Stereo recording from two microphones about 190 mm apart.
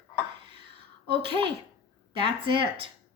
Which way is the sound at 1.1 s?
25° right (ahead or behind).